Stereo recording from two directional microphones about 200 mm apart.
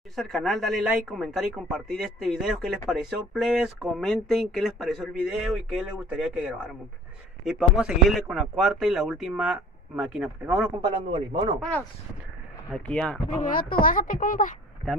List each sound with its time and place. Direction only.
0.1 s speech: centre (ahead or behind)
10.8 s a man's voice: 25° right (ahead or behind)
12.7 s speech: 5° left (ahead or behind)
13.4 s speech: 45° left (ahead or behind)